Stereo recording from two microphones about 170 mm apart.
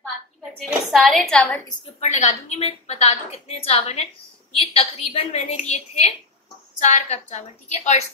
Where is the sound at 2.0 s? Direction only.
45° left (ahead or behind).